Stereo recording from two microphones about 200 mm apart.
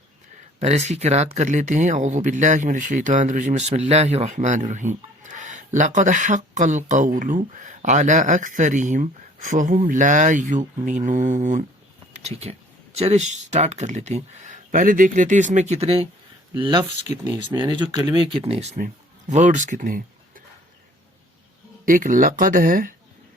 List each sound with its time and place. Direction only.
0.6 s speech: 35° right (ahead or behind)
21.8 s speech: 40° right (ahead or behind)